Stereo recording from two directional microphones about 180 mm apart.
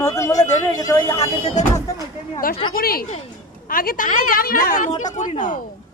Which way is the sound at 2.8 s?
55° left (ahead or behind).